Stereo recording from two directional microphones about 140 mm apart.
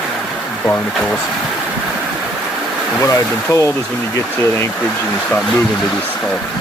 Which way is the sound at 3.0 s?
20° left (ahead or behind).